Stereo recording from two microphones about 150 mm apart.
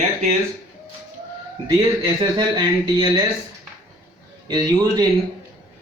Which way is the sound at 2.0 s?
25° right (ahead or behind).